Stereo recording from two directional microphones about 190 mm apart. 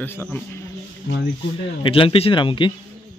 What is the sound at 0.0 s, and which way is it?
Speech, 10° left (ahead or behind).